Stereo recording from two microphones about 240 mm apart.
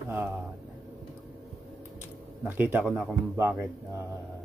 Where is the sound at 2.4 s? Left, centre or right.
Centre.